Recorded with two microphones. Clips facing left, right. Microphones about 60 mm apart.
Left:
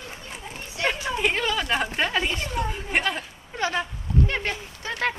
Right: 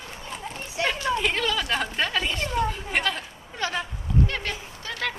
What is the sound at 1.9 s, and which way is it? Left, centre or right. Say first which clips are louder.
Speech: left 1 dB; centre.